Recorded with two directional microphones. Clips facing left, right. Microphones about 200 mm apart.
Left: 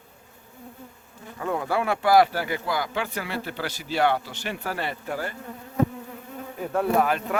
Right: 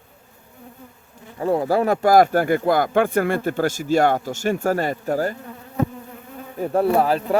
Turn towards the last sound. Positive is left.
turn(degrees=-35)  # may be behind; listen again after turning